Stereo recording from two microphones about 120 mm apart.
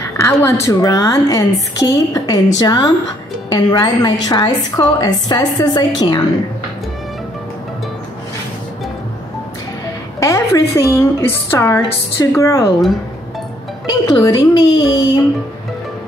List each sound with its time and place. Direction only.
0.2 s a woman's voice: 25° left (ahead or behind)
10.2 s a woman's voice: 25° left (ahead or behind)
13.8 s a woman's voice: 35° left (ahead or behind)